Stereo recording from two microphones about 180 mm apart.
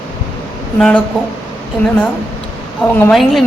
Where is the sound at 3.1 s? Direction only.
Centre (ahead or behind).